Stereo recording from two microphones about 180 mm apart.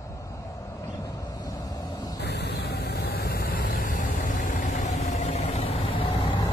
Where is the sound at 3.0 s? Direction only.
60° left (ahead or behind); by 6.0 s 35° left (ahead or behind).